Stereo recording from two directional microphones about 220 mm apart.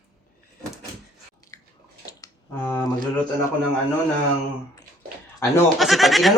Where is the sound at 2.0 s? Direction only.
15° left (ahead or behind).